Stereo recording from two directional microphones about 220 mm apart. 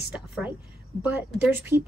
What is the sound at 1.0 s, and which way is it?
Speech, 5° right (ahead or behind).